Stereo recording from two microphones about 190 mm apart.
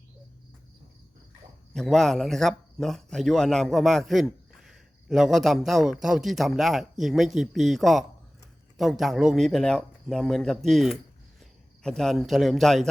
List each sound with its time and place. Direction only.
1.7 s a man's voice: centre (ahead or behind)